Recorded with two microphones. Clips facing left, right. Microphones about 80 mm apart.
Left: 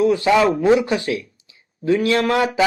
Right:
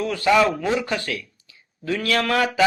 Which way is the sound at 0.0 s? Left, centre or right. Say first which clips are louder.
Left 3 dB; left.